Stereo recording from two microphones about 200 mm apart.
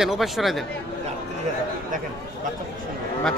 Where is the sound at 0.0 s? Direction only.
Centre (ahead or behind).